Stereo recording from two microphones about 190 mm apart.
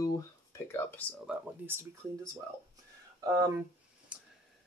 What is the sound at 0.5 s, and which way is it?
Speech, 10° left (ahead or behind).